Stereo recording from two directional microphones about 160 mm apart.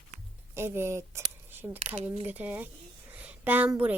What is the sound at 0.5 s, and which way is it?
A woman's voice, 15° right (ahead or behind).